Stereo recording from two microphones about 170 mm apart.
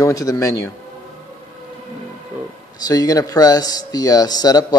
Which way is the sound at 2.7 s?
20° left (ahead or behind).